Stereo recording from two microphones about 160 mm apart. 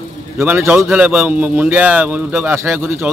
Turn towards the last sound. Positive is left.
turn(degrees=-15)  # may be behind; listen again after turning